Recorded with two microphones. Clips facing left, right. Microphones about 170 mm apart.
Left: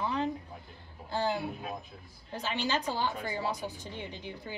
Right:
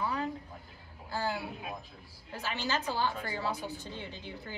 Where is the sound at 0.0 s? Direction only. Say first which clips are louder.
Left 2 dB; 25° left (ahead or behind).